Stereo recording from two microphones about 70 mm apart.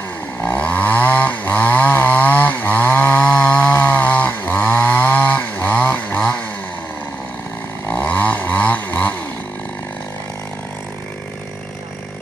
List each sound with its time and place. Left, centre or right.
0.4 s chainsaw: left
7.9 s chainsaw: left